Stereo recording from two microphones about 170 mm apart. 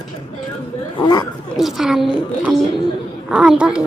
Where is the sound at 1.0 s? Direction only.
25° left (ahead or behind).